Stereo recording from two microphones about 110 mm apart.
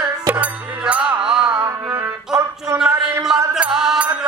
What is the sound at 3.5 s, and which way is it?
Mantra, 5° right (ahead or behind).